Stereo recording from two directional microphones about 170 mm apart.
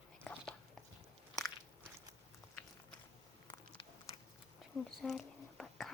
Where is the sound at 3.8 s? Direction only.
30° left (ahead or behind).